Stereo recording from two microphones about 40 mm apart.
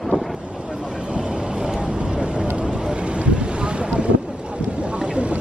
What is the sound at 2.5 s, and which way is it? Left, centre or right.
Boat, right.